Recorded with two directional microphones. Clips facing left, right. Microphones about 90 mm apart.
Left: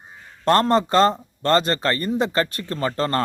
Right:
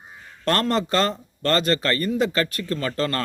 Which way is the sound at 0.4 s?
25° left (ahead or behind).